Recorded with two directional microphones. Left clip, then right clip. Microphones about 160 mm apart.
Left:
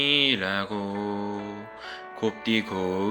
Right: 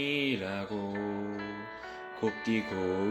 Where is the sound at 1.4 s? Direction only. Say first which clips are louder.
Left 3 dB; 40° right (ahead or behind).